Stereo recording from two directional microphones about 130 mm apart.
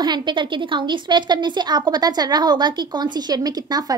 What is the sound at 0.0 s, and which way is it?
A woman's voice, 35° right (ahead or behind).